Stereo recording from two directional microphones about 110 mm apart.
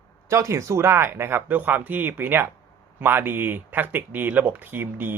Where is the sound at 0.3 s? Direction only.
25° right (ahead or behind).